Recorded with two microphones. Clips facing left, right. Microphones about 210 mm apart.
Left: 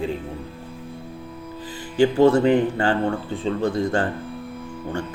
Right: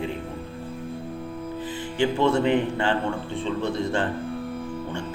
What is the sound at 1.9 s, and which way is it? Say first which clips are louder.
Speech: left 6 dB; 40° left (ahead or behind).